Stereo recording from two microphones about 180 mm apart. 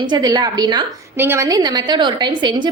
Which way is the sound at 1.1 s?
15° right (ahead or behind).